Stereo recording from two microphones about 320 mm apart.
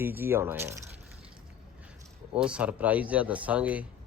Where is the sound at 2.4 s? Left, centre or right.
Centre.